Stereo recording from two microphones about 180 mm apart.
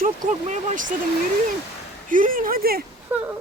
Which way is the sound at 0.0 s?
45° right (ahead or behind).